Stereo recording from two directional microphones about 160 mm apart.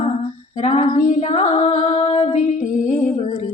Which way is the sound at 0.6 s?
45° left (ahead or behind).